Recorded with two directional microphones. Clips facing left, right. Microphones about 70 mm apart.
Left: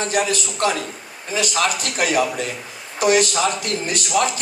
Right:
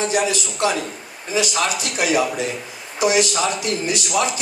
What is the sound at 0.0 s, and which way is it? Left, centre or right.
A man's voice, left.